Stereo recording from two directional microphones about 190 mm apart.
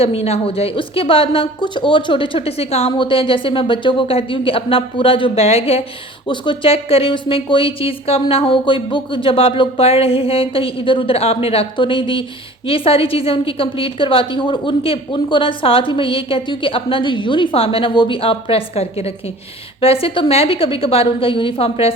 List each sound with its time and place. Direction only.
0.0 s a woman's voice: 30° left (ahead or behind)